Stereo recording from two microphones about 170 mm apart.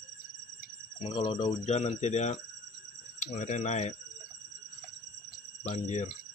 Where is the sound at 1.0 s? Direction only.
30° left (ahead or behind).